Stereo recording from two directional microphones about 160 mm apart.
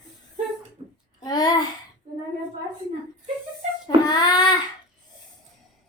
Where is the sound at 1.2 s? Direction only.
25° left (ahead or behind).